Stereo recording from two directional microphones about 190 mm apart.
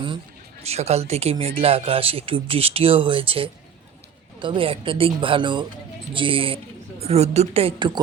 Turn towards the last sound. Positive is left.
turn(degrees=-30)  # may be behind; listen again after turning